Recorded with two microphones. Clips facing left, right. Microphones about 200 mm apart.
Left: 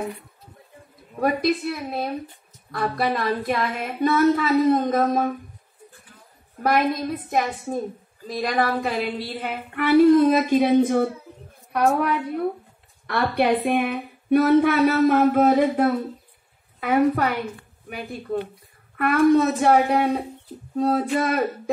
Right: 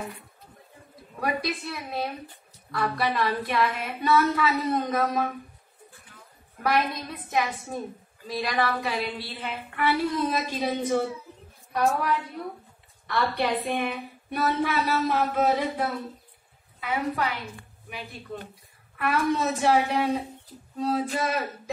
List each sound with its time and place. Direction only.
1.2 s a woman's voice: 45° left (ahead or behind)
6.6 s a woman's voice: 45° left (ahead or behind)